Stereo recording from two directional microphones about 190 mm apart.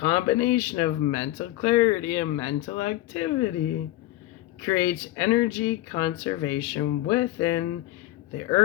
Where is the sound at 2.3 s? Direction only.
30° left (ahead or behind).